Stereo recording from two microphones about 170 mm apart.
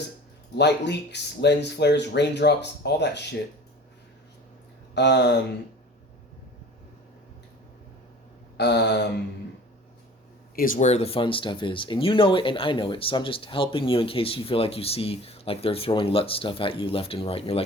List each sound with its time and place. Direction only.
0.5 s speech: 85° left
4.9 s speech: 85° left
8.5 s speech: 85° left
10.5 s speech: 55° left (ahead or behind); by 17.6 s 35° left (ahead or behind)